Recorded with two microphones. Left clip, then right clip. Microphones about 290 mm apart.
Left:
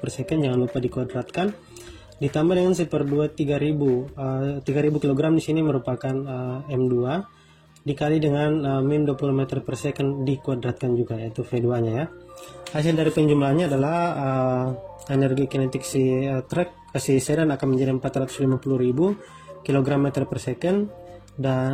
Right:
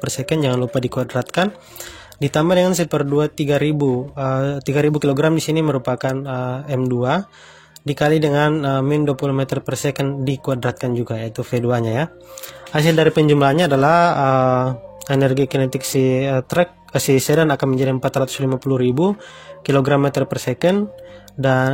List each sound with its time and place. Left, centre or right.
0.2 s speech: right
19.6 s speech: right